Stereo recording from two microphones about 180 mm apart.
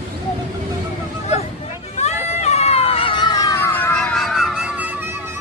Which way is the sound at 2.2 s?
35° left (ahead or behind).